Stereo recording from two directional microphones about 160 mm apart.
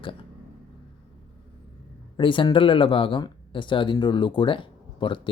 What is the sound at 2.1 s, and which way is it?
Speech, 30° left (ahead or behind).